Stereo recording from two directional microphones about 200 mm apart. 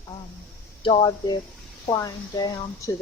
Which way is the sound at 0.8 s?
25° left (ahead or behind).